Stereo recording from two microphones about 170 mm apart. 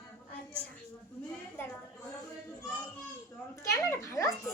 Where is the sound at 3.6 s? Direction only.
15° left (ahead or behind).